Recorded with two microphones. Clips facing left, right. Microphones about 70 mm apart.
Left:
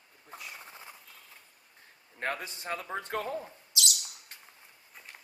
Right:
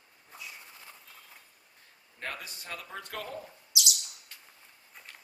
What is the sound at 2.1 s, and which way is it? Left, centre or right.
A man's voice, left.